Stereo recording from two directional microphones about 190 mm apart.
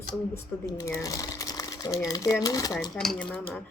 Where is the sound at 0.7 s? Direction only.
15° left (ahead or behind).